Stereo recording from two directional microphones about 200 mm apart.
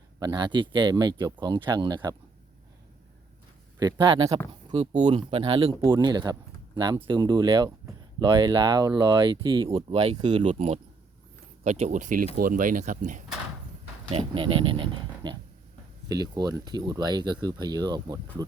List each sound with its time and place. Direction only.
0.2 s speech: 20° right (ahead or behind)
3.8 s speech: 20° right (ahead or behind)
10.2 s speech: 20° right (ahead or behind)
10.4 s speech: 35° right (ahead or behind)
14.1 s speech: 25° right (ahead or behind)